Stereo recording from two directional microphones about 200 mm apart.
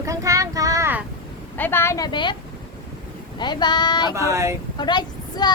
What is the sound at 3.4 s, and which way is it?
Speech, 20° left (ahead or behind).